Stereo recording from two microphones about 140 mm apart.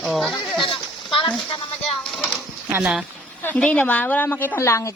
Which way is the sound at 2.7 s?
5° right (ahead or behind).